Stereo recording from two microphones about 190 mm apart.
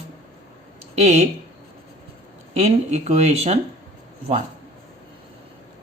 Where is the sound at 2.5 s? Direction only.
35° right (ahead or behind).